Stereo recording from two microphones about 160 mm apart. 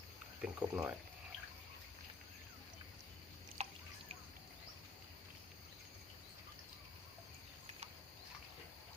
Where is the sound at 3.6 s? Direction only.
40° right (ahead or behind).